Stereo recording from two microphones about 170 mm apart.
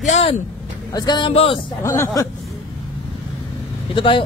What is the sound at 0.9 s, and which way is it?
Speech, 25° left (ahead or behind).